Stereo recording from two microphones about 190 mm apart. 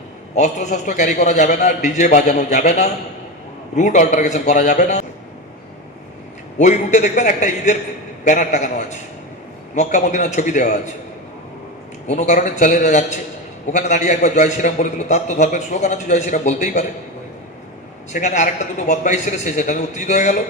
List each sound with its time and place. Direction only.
0.3 s a man's voice: 40° left (ahead or behind)
6.6 s a man's voice: 40° left (ahead or behind)
9.7 s a man's voice: 40° left (ahead or behind)
12.0 s a man's voice: 40° left (ahead or behind)
18.1 s a man's voice: 40° left (ahead or behind)